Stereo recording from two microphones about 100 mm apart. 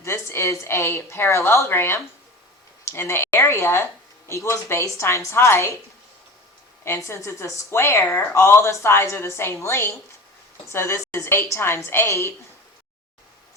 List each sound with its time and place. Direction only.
0.0 s speech: 25° left (ahead or behind)
6.8 s speech: 25° left (ahead or behind)